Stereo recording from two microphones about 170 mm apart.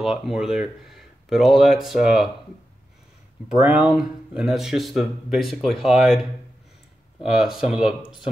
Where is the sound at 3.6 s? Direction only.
5° right (ahead or behind).